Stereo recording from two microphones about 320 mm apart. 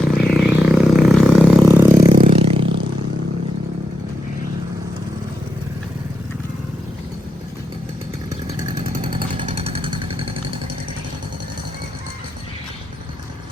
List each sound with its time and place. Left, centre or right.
0.0 s a sound: centre
2.2 s scrape: centre
8.3 s chainsaw: centre
9.0 s vehicle: centre